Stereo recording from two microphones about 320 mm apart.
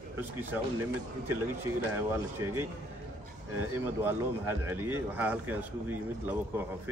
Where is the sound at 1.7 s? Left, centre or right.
Centre.